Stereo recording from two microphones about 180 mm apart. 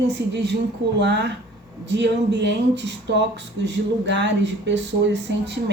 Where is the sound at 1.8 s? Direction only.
80° right.